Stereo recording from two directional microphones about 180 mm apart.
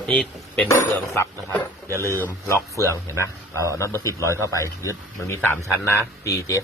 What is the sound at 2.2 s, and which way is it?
A man's voice, 15° left (ahead or behind).